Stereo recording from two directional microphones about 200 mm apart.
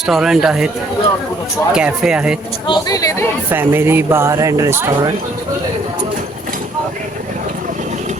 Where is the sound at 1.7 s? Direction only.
5° right (ahead or behind).